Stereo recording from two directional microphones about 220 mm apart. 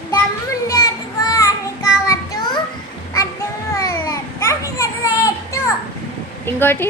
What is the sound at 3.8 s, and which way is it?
Children playing, 15° left (ahead or behind).